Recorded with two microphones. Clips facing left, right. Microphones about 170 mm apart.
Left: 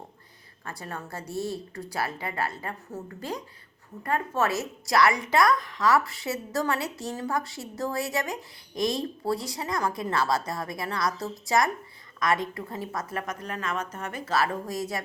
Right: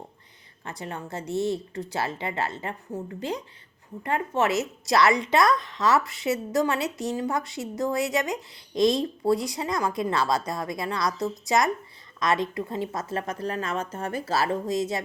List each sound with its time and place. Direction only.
0.6 s speech: 20° right (ahead or behind)